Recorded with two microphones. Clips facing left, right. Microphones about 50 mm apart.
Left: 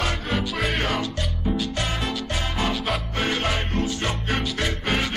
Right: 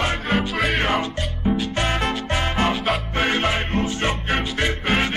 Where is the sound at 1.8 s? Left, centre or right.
Right.